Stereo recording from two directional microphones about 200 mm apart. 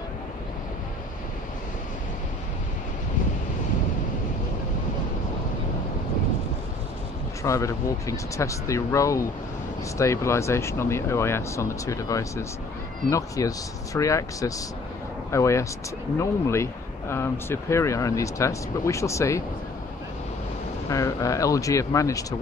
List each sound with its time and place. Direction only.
7.4 s speech: 15° left (ahead or behind)
20.9 s speech: 15° left (ahead or behind)